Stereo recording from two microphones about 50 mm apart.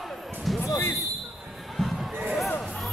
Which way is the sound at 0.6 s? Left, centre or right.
Left.